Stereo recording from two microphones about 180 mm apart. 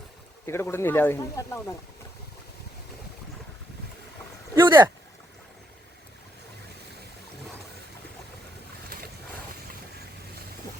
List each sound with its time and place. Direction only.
0.4 s speech: 15° left (ahead or behind)
4.5 s speech: 25° right (ahead or behind)